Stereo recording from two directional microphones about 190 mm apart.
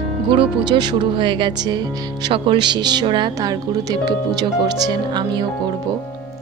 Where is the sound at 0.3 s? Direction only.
25° right (ahead or behind).